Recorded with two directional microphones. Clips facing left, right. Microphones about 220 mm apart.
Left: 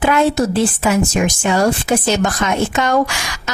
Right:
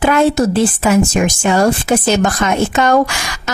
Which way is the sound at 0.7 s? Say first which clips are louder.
Right 3 dB; 45° right (ahead or behind).